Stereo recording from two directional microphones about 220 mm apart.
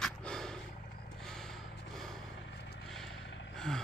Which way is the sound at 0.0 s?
5° left (ahead or behind).